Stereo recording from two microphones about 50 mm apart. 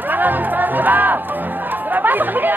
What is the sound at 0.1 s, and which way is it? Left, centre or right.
Music, right.